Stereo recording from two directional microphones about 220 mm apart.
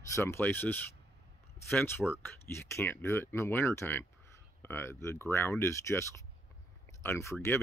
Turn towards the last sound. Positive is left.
turn(degrees=10)  # may be behind; listen again after turning